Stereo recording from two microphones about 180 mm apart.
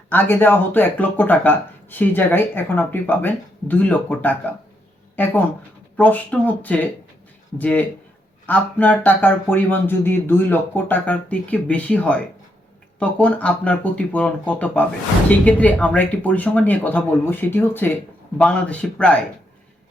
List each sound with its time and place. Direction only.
0.1 s speech: 10° left (ahead or behind)